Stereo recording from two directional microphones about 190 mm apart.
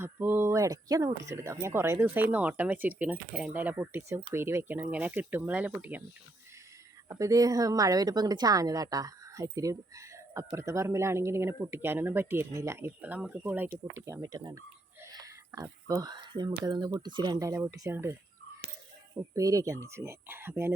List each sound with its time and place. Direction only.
0.0 s speech: 10° right (ahead or behind)
7.1 s speech: 20° right (ahead or behind)